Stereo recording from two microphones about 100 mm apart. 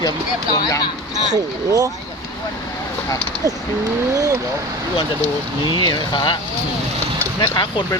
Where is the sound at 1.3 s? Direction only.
40° right (ahead or behind).